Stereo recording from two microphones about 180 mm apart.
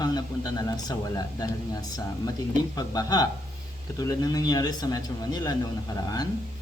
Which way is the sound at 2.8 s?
20° left (ahead or behind).